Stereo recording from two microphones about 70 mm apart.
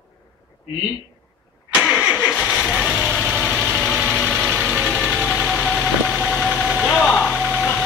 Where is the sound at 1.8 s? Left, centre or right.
Centre.